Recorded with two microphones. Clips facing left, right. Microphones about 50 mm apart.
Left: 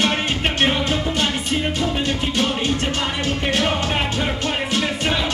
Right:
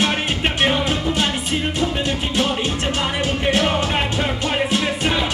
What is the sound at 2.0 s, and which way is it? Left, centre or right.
Music, centre.